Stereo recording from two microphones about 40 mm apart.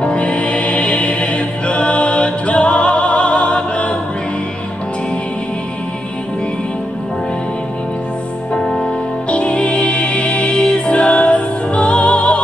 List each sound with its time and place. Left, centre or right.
0.0 s music: left
8.5 s music: left